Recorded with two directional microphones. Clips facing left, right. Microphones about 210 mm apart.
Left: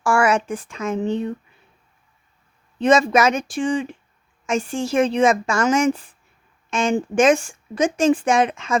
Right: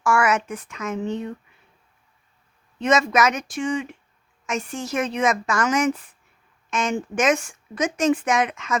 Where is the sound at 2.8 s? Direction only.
30° left (ahead or behind).